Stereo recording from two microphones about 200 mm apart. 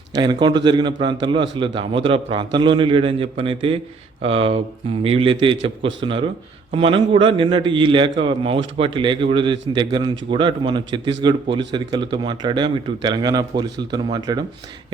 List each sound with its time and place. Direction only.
0.1 s a man's voice: 20° right (ahead or behind)